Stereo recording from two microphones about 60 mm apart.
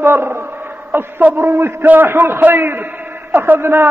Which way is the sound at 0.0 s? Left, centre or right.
Right.